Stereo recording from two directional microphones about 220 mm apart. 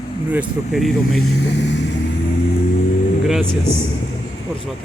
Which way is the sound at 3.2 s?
Centre (ahead or behind).